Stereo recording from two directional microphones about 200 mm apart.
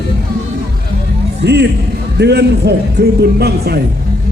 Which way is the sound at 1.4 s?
55° right (ahead or behind).